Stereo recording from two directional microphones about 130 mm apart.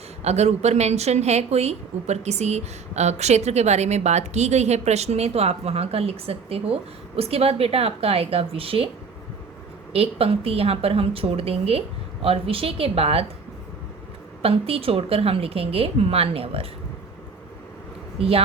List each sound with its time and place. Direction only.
0.3 s a woman's voice: 55° right (ahead or behind)
9.9 s a woman's voice: 50° right (ahead or behind)
14.4 s a woman's voice: 45° right (ahead or behind)
18.2 s a woman's voice: 50° right (ahead or behind)